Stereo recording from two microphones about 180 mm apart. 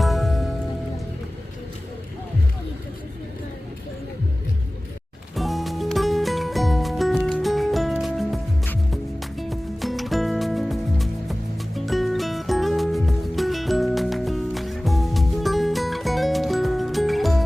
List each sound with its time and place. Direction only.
0.0 s music: centre (ahead or behind)
5.3 s music: centre (ahead or behind)